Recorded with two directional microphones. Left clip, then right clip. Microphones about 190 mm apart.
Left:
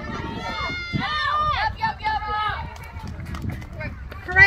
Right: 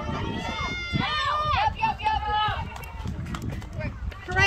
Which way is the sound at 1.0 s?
35° right (ahead or behind).